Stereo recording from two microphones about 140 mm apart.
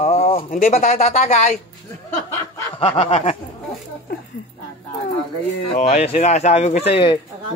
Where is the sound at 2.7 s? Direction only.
45° left (ahead or behind).